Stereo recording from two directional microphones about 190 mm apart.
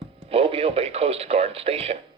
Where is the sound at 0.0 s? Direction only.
30° right (ahead or behind).